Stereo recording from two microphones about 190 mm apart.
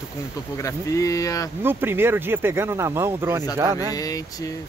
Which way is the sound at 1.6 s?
10° right (ahead or behind).